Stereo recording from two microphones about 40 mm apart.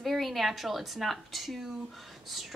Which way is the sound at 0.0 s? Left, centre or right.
Centre.